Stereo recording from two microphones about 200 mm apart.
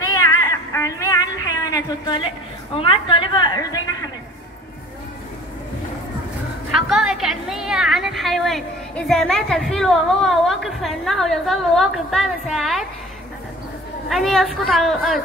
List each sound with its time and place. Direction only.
0.1 s a sound: 15° left (ahead or behind)
6.7 s a woman's voice: centre (ahead or behind)
14.0 s a woman's voice: centre (ahead or behind)